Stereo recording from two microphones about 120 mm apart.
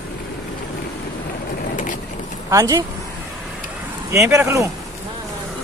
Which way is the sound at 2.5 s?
30° right (ahead or behind).